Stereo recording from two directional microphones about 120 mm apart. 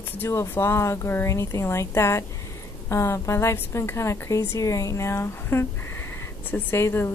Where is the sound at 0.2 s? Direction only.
25° left (ahead or behind).